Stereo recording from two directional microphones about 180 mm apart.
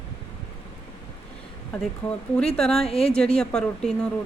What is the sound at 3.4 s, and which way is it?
Speech, 5° left (ahead or behind).